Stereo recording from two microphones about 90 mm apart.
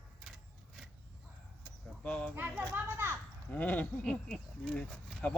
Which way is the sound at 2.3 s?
25° right (ahead or behind).